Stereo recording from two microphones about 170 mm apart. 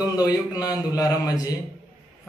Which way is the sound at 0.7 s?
20° left (ahead or behind).